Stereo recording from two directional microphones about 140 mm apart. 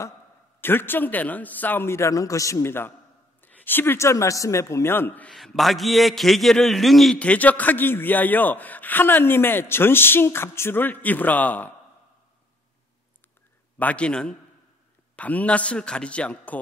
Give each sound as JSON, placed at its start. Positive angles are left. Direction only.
{"t": 0.6, "sound": "a man's voice", "side_deg": 15}
{"t": 13.7, "sound": "a man's voice", "side_deg": 10}